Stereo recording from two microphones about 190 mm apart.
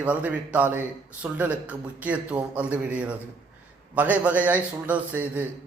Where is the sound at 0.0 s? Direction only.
10° right (ahead or behind).